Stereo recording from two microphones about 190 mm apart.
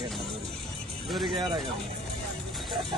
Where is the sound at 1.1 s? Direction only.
Centre (ahead or behind).